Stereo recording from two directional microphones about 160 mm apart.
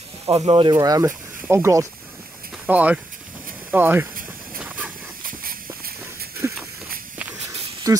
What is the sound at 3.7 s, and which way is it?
Speech, 10° right (ahead or behind).